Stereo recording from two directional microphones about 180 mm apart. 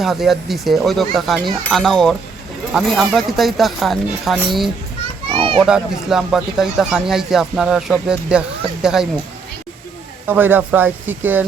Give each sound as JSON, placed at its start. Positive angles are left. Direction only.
{"t": 0.0, "sound": "speech", "side_deg": 0}
{"t": 5.3, "sound": "children playing", "side_deg": -30}
{"t": 5.5, "sound": "speech", "side_deg": -5}
{"t": 10.2, "sound": "speech", "side_deg": -10}